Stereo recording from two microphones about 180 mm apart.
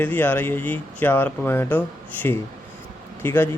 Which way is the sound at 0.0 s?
10° left (ahead or behind).